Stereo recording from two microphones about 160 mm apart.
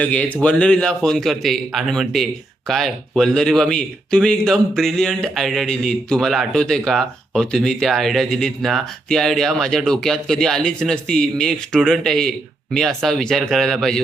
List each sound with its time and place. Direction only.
0.0 s a man's voice: 5° left (ahead or behind)